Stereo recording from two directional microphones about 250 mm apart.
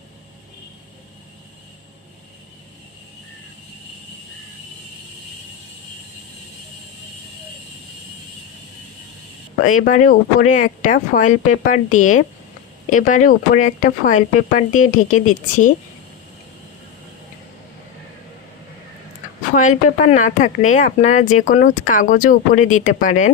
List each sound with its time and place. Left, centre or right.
9.6 s speech: left
19.5 s speech: left